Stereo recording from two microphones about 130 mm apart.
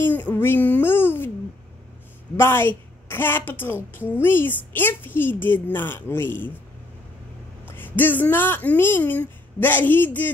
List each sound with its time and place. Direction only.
0.0 s a child's voice: 15° left (ahead or behind)
2.3 s a woman's voice: 20° left (ahead or behind)
7.6 s a woman's voice: 15° left (ahead or behind)